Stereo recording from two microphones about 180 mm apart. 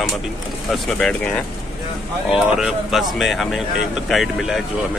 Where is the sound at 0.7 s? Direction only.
5° left (ahead or behind).